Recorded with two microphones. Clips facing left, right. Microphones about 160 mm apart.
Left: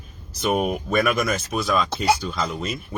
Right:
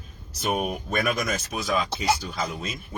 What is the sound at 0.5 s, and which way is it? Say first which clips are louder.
Speech: left 5 dB; 40° left (ahead or behind).